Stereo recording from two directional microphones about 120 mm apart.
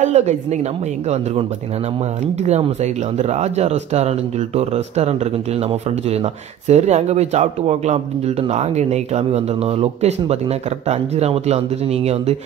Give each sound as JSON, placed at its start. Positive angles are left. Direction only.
{"t": 0.0, "sound": "a woman's voice", "side_deg": -75}
{"t": 2.4, "sound": "speech", "side_deg": -70}